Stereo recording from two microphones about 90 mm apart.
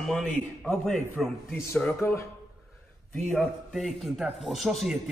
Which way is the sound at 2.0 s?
30° left (ahead or behind).